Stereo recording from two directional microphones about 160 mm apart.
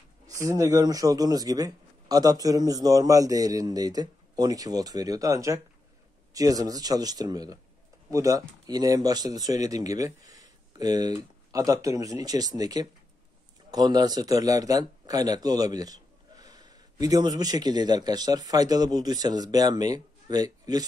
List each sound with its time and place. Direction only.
0.3 s speech: 20° right (ahead or behind)